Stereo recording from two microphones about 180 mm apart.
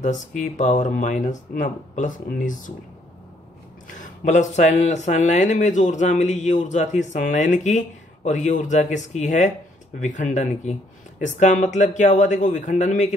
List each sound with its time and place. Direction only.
0.4 s speech: 45° left (ahead or behind)
4.0 s speech: 45° left (ahead or behind)